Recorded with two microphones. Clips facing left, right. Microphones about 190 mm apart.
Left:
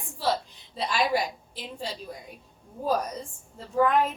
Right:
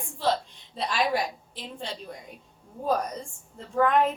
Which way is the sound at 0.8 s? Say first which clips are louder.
Left 1 dB; centre (ahead or behind).